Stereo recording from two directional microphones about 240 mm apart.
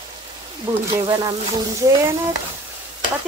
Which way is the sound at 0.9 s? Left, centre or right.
Centre.